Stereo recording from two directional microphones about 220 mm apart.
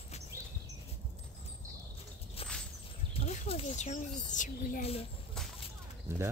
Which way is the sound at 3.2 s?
30° left (ahead or behind).